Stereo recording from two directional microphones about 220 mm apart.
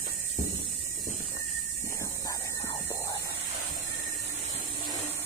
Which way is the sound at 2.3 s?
15° left (ahead or behind).